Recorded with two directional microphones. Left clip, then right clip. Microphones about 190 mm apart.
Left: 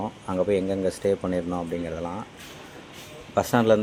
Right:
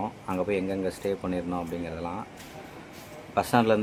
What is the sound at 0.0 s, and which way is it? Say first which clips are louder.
Speech: left 4 dB; 15° left (ahead or behind).